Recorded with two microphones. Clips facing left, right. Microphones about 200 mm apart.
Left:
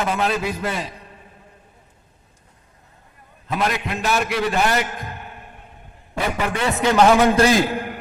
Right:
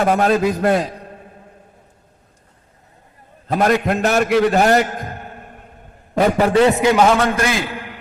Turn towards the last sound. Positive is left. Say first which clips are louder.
# left 5 dB
turn(degrees=45)  # may be behind; listen again after turning